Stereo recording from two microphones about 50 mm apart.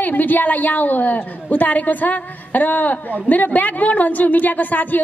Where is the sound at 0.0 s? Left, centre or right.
Left.